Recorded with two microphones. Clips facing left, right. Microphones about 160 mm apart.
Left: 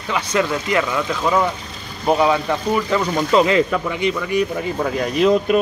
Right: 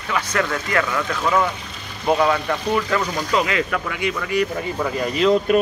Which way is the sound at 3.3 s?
30° left (ahead or behind).